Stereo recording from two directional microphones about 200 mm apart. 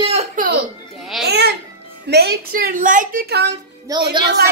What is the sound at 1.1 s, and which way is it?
Speech, centre (ahead or behind).